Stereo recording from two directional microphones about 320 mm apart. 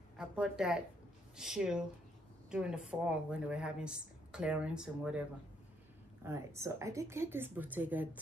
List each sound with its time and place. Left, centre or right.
0.2 s speech: centre
6.2 s a woman's voice: centre